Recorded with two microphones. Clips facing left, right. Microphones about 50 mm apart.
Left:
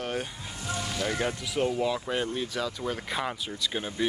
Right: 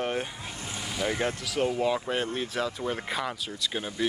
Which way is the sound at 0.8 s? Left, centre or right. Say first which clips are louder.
Right 1 dB; centre.